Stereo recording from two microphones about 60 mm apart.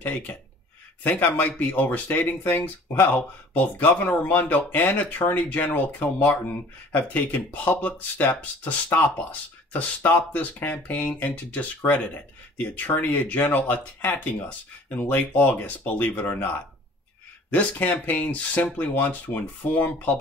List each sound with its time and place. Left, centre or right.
0.0 s speech: left